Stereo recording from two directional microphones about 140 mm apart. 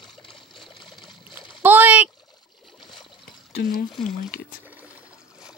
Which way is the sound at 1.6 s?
10° right (ahead or behind).